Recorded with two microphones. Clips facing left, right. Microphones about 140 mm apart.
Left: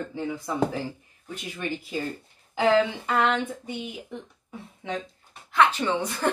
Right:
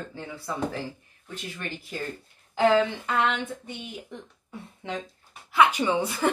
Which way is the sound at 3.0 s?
5° left (ahead or behind).